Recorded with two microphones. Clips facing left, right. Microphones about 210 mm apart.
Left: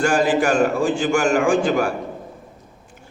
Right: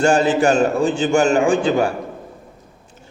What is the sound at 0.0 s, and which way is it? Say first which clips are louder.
A man's voice: right 3 dB; 25° right (ahead or behind).